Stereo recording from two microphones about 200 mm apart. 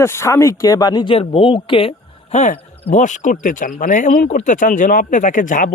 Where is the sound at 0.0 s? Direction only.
15° left (ahead or behind).